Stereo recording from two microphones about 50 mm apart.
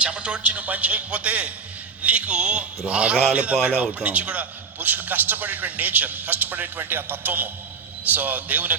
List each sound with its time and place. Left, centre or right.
0.0 s a man's voice: right